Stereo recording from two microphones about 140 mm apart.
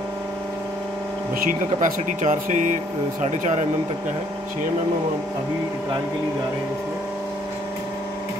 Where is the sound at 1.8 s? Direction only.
65° right (ahead or behind).